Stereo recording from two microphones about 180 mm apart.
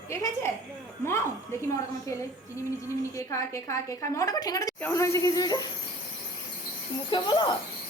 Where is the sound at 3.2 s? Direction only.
15° left (ahead or behind).